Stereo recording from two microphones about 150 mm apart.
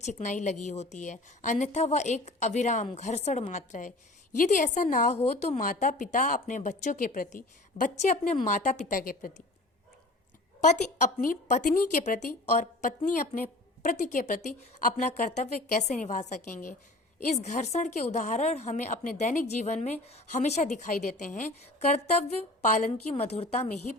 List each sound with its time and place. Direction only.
0.0 s a woman's voice: 55° left (ahead or behind)
5.6 s speech: 60° left (ahead or behind)
11.2 s a woman's voice: 65° left (ahead or behind)
22.9 s a woman's voice: 45° left (ahead or behind)